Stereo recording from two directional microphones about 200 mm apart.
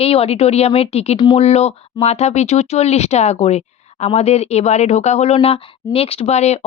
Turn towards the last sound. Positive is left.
turn(degrees=35)  # may be behind; listen again after turning